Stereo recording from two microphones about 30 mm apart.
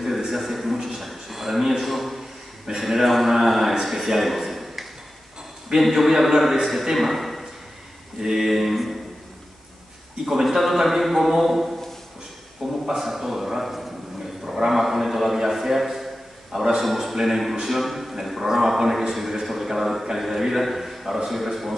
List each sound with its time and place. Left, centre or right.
0.3 s a sound: centre
5.8 s a man's voice: centre
8.2 s a man's voice: centre
10.4 s a man's voice: centre
12.8 s a man's voice: centre
14.4 s a sound: right
14.7 s a man's voice: centre